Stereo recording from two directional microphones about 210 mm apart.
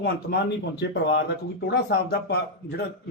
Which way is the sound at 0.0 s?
50° left (ahead or behind).